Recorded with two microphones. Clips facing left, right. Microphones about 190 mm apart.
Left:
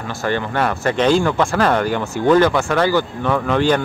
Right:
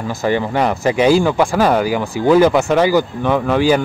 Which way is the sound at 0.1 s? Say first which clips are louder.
Right 3 dB; 15° right (ahead or behind).